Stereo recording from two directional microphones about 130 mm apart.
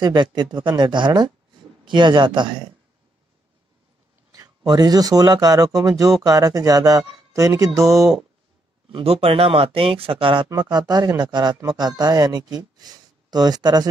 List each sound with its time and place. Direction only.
0.0 s speech: 35° right (ahead or behind)
4.3 s speech: 30° right (ahead or behind)
8.0 s speech: centre (ahead or behind)
8.9 s speech: 50° right (ahead or behind)
10.6 s speech: 35° right (ahead or behind)